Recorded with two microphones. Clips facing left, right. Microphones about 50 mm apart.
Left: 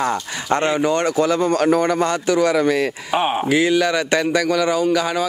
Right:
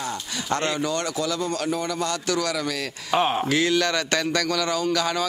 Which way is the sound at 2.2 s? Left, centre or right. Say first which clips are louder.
Left 12 dB; left.